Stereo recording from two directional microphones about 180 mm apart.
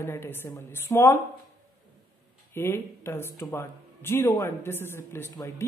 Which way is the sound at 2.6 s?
15° left (ahead or behind).